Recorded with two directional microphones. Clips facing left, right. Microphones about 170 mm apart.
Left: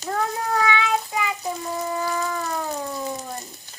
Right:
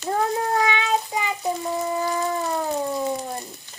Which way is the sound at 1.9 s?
25° right (ahead or behind).